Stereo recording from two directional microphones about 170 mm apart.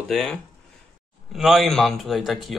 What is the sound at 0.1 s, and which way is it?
Speech, 5° left (ahead or behind).